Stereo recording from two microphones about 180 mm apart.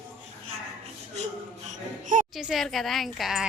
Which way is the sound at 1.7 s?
45° right (ahead or behind).